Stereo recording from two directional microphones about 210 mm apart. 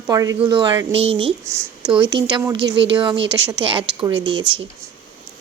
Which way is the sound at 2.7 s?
60° right (ahead or behind).